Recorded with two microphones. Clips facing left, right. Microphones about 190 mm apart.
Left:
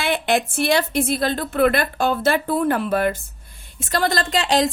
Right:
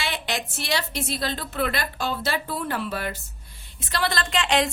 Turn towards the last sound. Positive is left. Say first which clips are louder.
# left 4 dB
turn(degrees=35)  # may be behind; listen again after turning